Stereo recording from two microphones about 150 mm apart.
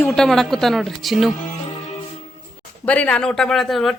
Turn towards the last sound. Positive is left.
turn(degrees=0)  # may be behind; listen again after turning